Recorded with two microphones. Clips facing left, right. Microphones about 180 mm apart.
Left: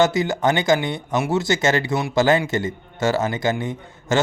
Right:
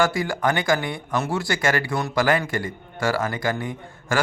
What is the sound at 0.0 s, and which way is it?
A man's voice, 20° left (ahead or behind).